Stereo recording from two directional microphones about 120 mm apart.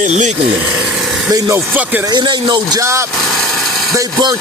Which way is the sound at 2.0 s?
40° right (ahead or behind).